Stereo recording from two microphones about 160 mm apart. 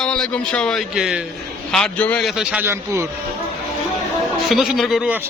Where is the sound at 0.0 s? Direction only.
5° left (ahead or behind).